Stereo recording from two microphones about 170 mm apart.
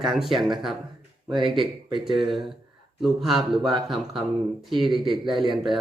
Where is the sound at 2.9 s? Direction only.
Centre (ahead or behind).